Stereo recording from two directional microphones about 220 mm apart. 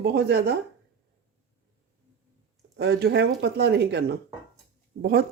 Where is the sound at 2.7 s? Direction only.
50° right (ahead or behind).